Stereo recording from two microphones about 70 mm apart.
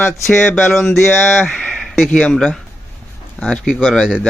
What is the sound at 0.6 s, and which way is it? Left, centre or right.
Speech, centre.